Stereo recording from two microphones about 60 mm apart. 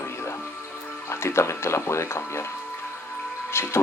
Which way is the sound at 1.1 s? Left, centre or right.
Left.